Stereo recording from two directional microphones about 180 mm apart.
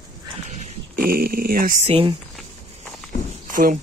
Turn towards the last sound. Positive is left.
turn(degrees=-50)  # may be behind; listen again after turning